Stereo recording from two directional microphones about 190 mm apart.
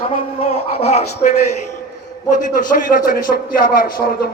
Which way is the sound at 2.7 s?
45° left (ahead or behind).